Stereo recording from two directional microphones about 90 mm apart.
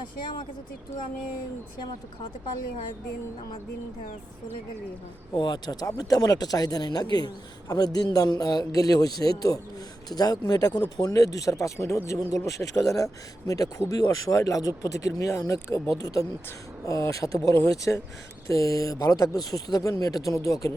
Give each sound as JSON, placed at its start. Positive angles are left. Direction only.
{"t": 5.3, "sound": "speech", "side_deg": 55}